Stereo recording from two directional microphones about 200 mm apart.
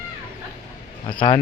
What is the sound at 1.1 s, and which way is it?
Speech, 25° left (ahead or behind).